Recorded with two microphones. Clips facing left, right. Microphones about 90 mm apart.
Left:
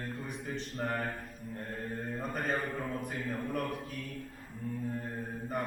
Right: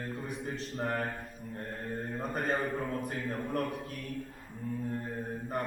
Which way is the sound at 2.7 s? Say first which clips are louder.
Right 2 dB; 10° right (ahead or behind).